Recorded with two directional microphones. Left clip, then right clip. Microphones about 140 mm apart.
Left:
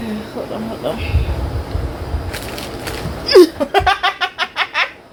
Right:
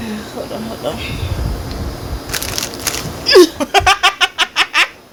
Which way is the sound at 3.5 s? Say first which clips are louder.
Right 3 dB; 25° right (ahead or behind).